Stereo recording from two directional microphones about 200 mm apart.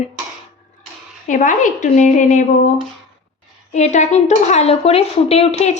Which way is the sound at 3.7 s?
35° left (ahead or behind).